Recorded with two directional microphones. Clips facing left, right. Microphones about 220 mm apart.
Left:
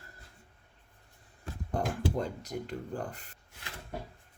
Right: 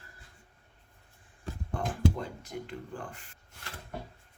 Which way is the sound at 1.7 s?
40° left (ahead or behind).